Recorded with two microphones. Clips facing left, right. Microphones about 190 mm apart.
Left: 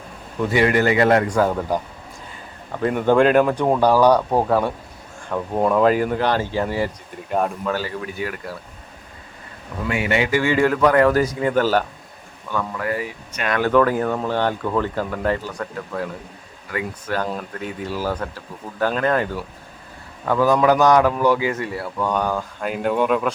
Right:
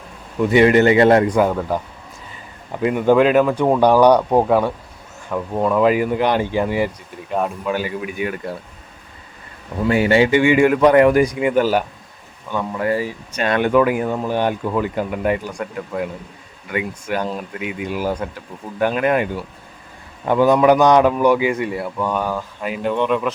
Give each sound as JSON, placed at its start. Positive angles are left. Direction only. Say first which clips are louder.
{"t": 0.5, "sound": "a man's voice", "louder": "right 5 dB", "side_deg": -25}
{"t": 2.8, "sound": "speech", "louder": "right 2 dB", "side_deg": -5}
{"t": 5.5, "sound": "speech", "louder": "even", "side_deg": 5}
{"t": 5.8, "sound": "speech", "louder": "right 1 dB", "side_deg": -10}
{"t": 7.3, "sound": "speech", "louder": "even", "side_deg": 0}
{"t": 7.7, "sound": "speech", "louder": "right 2 dB", "side_deg": -15}
{"t": 9.8, "sound": "a man's voice", "louder": "right 6 dB", "side_deg": -30}
{"t": 13.7, "sound": "a man's voice", "louder": "left 1 dB", "side_deg": -10}
{"t": 21.9, "sound": "speech", "louder": "left 2 dB", "side_deg": -5}